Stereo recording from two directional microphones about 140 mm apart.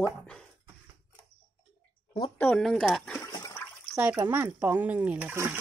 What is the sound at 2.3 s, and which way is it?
Speech, 10° left (ahead or behind).